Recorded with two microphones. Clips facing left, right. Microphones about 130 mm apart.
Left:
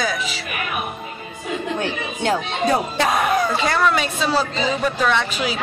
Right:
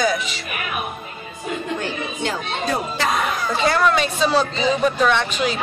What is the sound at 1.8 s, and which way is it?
Speech, 60° left (ahead or behind).